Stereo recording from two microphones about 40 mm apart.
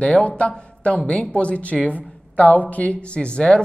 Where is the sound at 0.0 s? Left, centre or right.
Left.